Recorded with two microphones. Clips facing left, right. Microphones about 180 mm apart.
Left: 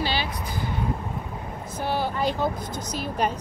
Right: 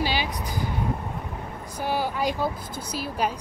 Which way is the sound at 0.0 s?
10° right (ahead or behind).